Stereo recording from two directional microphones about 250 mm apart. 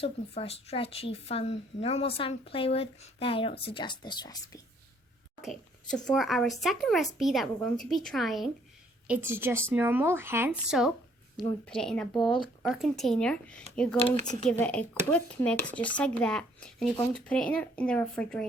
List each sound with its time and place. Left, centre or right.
0.0 s speech: left
5.4 s a sound: centre
6.1 s speech: centre